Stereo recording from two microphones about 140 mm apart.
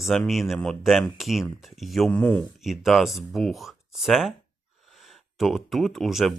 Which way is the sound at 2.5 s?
Centre (ahead or behind).